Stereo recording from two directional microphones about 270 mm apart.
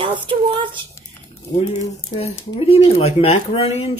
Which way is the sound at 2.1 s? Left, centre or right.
Left.